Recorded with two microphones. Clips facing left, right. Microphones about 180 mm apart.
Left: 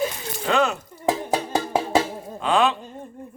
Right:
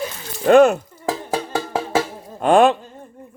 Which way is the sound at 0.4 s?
50° right (ahead or behind).